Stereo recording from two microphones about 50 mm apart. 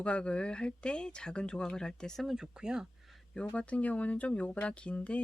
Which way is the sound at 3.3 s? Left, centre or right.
Left.